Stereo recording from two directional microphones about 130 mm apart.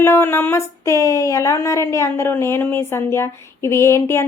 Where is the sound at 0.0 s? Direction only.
20° left (ahead or behind).